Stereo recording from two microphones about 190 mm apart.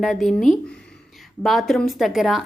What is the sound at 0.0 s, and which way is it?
Speech, centre (ahead or behind).